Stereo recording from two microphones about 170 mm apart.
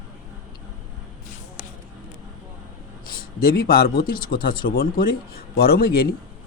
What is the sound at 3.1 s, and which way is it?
Speech, 65° left (ahead or behind).